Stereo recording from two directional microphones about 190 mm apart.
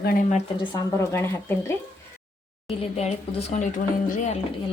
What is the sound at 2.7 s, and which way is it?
A woman's voice, 35° left (ahead or behind).